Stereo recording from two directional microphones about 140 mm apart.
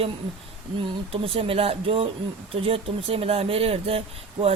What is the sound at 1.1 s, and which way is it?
Speech, 45° right (ahead or behind).